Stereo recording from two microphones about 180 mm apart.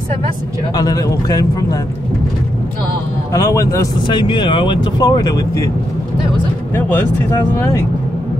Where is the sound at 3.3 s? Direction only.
15° left (ahead or behind).